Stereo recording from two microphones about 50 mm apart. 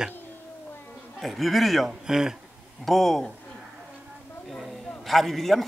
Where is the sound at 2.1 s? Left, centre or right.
Centre.